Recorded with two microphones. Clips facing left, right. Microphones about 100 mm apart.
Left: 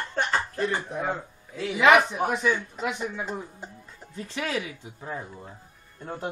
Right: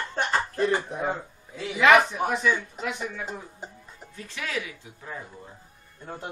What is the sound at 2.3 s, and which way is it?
Speech, 15° left (ahead or behind).